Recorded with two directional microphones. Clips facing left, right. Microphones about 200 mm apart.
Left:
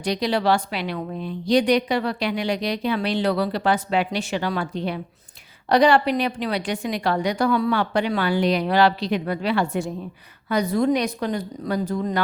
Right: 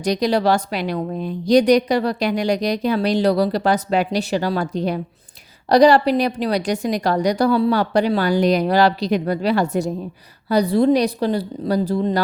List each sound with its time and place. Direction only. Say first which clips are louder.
0.0 s a woman's voice: right 4 dB; 40° right (ahead or behind)